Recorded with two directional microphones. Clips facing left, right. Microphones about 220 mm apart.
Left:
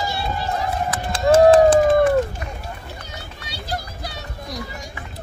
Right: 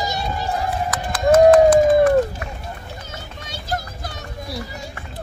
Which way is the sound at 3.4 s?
50° right (ahead or behind).